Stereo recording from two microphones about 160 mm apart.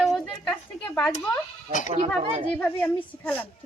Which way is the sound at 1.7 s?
50° left (ahead or behind).